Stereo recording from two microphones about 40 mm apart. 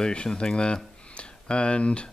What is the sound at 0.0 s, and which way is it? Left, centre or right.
Speech, left.